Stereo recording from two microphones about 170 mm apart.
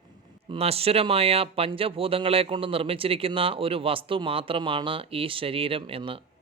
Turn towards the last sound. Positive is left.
turn(degrees=-30)  # may be behind; listen again after turning